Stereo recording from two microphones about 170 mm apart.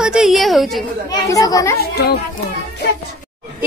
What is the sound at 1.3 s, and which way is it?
Speech, 20° left (ahead or behind).